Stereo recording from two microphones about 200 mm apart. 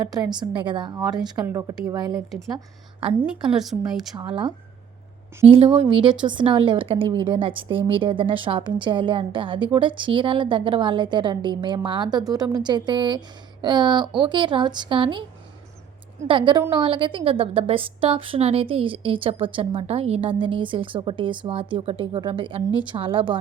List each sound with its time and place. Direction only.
0.0 s a woman's voice: 20° right (ahead or behind)
3.2 s a woman's voice: 5° right (ahead or behind)
4.3 s a woman's voice: 25° right (ahead or behind)
16.2 s a woman's voice: 25° right (ahead or behind)